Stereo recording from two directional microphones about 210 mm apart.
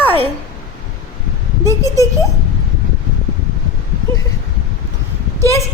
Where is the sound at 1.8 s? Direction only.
15° left (ahead or behind).